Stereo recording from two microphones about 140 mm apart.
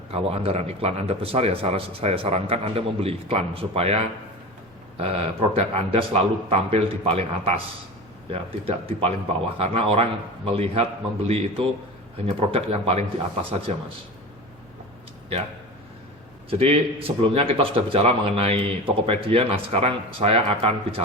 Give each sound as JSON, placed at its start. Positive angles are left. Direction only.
{"t": 0.1, "sound": "a man's voice", "side_deg": -45}
{"t": 16.5, "sound": "a man's voice", "side_deg": -45}